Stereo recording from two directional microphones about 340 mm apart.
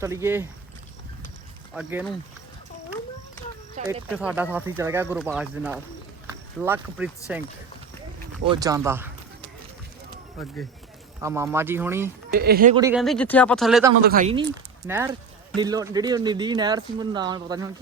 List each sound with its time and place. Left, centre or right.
0.0 s speech: centre
1.7 s speech: centre
4.1 s speech: centre
8.4 s speech: centre
11.2 s speech: centre
12.3 s speech: right
12.7 s speech: centre
14.0 s speech: right